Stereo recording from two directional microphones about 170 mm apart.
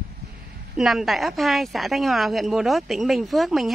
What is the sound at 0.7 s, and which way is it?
Speech, centre (ahead or behind).